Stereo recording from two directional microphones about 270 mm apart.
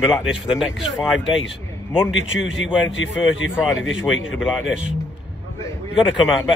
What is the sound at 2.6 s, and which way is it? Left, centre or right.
Speech, centre.